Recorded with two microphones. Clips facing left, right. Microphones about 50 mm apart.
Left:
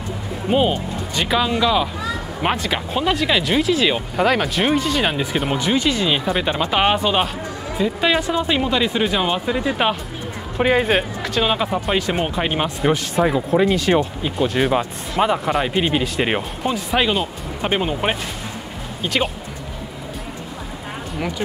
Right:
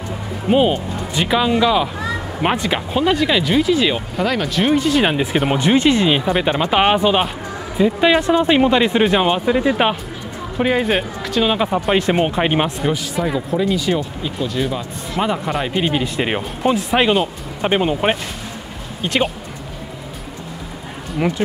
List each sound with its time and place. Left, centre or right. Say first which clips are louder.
0.5 s speech: right 3 dB; centre
4.2 s speech: left 1 dB; centre; by 6.0 s right
6.0 s speech: right 3 dB; centre
10.6 s speech: even; centre
13.2 s speech: left 4 dB; left
15.1 s speech: left 2 dB; centre
16.6 s speech: right 5 dB; centre
21.4 s speech: right 4 dB; right